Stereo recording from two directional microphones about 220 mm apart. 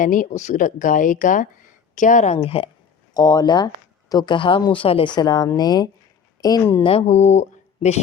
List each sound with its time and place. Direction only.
0.0 s a woman's voice: 35° left (ahead or behind); by 6.8 s 15° left (ahead or behind)
6.8 s speech: 25° left (ahead or behind)